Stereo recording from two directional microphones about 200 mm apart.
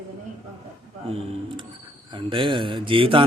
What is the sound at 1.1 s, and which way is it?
A man's voice, 30° right (ahead or behind).